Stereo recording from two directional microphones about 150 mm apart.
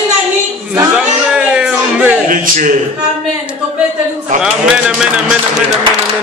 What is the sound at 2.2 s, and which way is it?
Speech, 60° right (ahead or behind).